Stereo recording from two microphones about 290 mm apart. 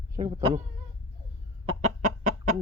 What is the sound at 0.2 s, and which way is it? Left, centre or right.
Speech, right.